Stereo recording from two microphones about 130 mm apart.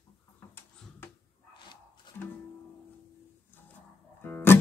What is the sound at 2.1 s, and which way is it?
Music, 35° left (ahead or behind).